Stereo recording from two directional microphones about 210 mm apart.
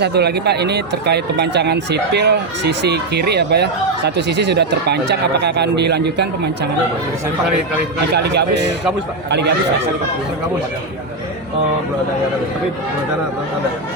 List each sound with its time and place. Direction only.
0.0 s speech: 50° right (ahead or behind)
8.1 s speech: 50° right (ahead or behind)